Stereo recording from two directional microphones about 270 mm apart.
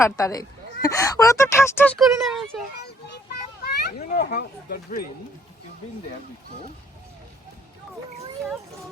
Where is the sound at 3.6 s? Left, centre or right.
Left.